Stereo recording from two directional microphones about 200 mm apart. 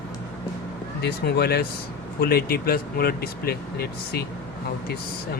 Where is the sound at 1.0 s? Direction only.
55° left (ahead or behind).